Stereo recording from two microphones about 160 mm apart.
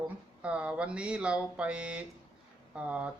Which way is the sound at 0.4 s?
5° right (ahead or behind).